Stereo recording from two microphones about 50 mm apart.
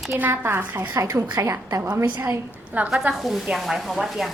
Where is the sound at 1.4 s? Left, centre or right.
Right.